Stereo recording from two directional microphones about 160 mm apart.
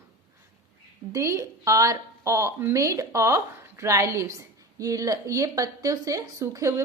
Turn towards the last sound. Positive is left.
turn(degrees=-20)  # may be behind; listen again after turning